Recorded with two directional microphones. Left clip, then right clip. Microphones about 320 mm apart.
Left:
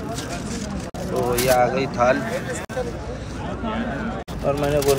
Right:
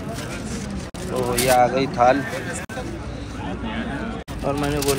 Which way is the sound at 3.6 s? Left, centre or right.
Left.